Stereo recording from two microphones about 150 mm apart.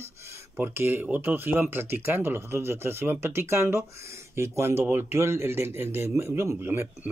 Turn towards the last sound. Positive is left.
turn(degrees=-15)  # may be behind; listen again after turning